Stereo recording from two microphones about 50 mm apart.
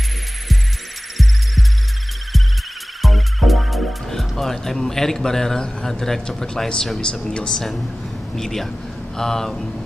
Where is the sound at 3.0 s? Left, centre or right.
Centre.